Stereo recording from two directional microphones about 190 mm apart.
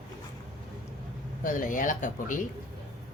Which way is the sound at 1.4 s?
45° left (ahead or behind).